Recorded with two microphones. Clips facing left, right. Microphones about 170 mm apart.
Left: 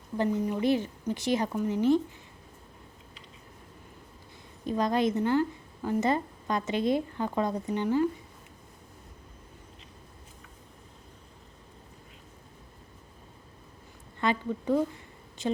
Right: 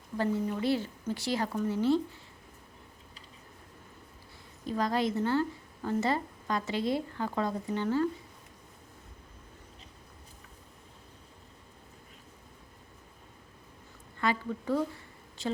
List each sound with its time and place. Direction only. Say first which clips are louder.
0.2 s a woman's voice: left 3 dB; 20° left (ahead or behind)
4.6 s a woman's voice: left 3 dB; 20° left (ahead or behind)
14.2 s a woman's voice: left 2 dB; 20° left (ahead or behind)